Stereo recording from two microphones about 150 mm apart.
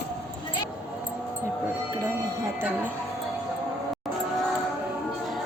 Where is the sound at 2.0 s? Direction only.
20° right (ahead or behind).